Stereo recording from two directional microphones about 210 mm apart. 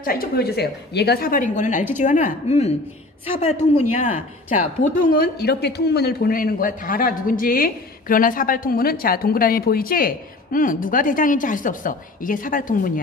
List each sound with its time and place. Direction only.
0.0 s a woman's voice: 45° left (ahead or behind)
4.5 s speech: 40° left (ahead or behind)